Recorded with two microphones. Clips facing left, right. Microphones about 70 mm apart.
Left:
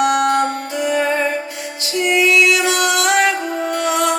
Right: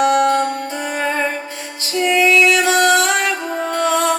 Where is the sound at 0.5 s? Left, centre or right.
Right.